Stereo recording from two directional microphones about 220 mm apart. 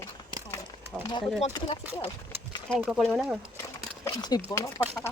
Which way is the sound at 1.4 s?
20° left (ahead or behind).